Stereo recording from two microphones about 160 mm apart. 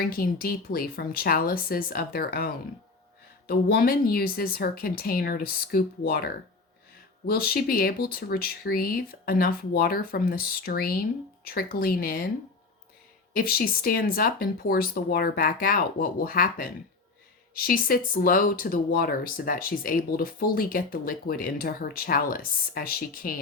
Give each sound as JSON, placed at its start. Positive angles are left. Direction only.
{"t": 0.0, "sound": "speech", "side_deg": 65}
{"t": 13.3, "sound": "speech", "side_deg": 65}
{"t": 17.7, "sound": "speech", "side_deg": 65}